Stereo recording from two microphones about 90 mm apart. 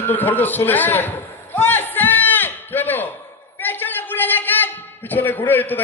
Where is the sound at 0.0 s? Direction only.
20° left (ahead or behind).